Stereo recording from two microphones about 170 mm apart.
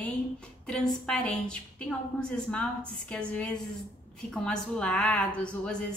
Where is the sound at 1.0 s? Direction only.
5° left (ahead or behind).